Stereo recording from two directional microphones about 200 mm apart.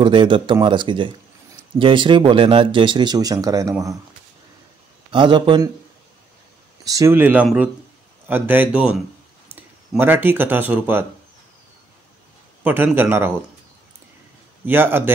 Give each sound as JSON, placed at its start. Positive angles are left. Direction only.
{"t": 0.0, "sound": "speech", "side_deg": -25}
{"t": 5.1, "sound": "speech", "side_deg": -25}
{"t": 6.9, "sound": "speech", "side_deg": -15}
{"t": 12.6, "sound": "speech", "side_deg": -10}
{"t": 14.7, "sound": "speech", "side_deg": -10}